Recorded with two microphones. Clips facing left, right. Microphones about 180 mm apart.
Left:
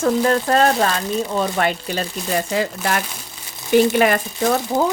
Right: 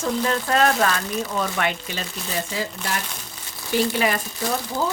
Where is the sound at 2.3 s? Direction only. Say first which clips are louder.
Left 7 dB; 65° left (ahead or behind).